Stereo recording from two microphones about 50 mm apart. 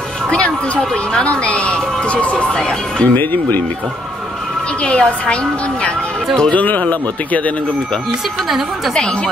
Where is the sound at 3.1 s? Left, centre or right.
Left.